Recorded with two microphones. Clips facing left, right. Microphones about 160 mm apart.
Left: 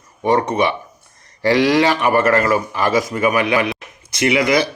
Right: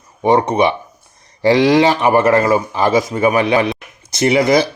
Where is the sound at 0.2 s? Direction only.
20° right (ahead or behind).